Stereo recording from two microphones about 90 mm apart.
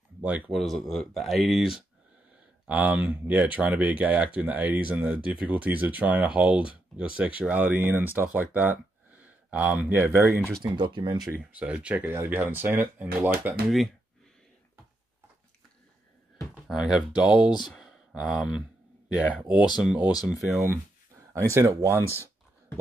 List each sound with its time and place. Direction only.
0.2 s speech: 15° right (ahead or behind)
0.5 s speech: centre (ahead or behind)
2.7 s speech: 20° right (ahead or behind)
10.6 s speech: 60° right (ahead or behind)
11.5 s speech: 15° right (ahead or behind)
16.3 s a sound: centre (ahead or behind)
17.2 s speech: 10° right (ahead or behind)
17.6 s a sound: centre (ahead or behind)
18.1 s speech: 10° right (ahead or behind)
21.5 s speech: 30° right (ahead or behind)